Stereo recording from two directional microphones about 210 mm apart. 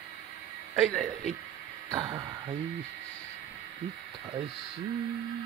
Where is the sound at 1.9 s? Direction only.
20° right (ahead or behind).